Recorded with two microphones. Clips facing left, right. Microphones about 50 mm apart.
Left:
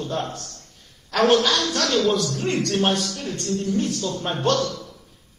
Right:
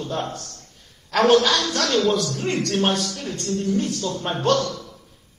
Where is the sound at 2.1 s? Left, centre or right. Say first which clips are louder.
Even; centre.